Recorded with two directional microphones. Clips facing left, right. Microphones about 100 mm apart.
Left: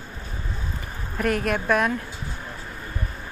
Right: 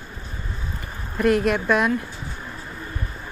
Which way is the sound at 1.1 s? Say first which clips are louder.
Right 5 dB; 5° right (ahead or behind).